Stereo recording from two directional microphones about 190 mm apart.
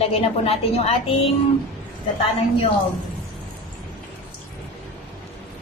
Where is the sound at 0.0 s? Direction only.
30° left (ahead or behind).